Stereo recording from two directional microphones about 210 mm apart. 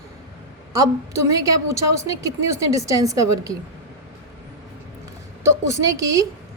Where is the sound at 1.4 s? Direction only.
15° right (ahead or behind).